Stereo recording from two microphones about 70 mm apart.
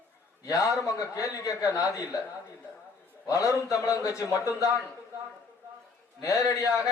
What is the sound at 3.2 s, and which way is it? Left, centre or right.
A man's voice, left.